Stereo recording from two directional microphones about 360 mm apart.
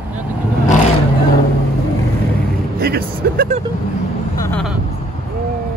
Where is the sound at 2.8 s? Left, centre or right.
Right.